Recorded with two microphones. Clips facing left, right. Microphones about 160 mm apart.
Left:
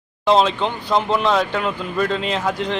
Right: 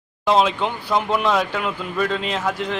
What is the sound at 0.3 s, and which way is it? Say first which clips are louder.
Speech: left 2 dB; 5° right (ahead or behind).